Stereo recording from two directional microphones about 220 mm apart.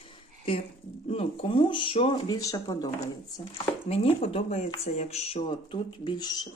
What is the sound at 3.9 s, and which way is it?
Speech, 25° left (ahead or behind).